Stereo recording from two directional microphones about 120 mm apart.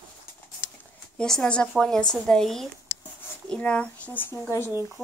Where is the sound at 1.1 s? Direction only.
5° left (ahead or behind).